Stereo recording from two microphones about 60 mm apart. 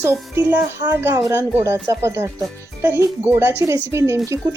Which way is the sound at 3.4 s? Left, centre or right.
Right.